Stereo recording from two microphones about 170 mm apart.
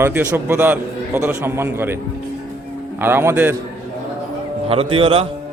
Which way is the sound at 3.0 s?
15° right (ahead or behind).